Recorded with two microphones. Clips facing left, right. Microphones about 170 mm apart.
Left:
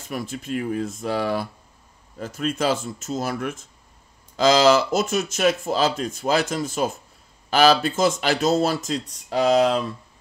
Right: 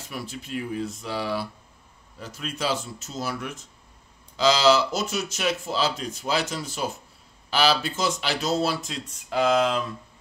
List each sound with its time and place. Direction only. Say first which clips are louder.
0.1 s speech: left 5 dB; 50° left (ahead or behind); by 9.9 s 35° left (ahead or behind)